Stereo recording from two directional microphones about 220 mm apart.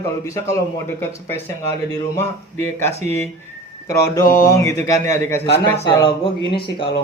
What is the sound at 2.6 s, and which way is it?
Speech, 10° left (ahead or behind).